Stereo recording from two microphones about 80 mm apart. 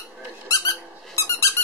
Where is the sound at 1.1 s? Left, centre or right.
Left.